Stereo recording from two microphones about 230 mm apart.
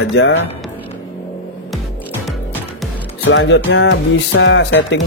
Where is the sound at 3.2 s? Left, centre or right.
Left.